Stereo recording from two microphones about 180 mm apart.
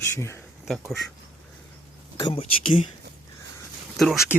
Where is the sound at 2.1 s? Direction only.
30° left (ahead or behind).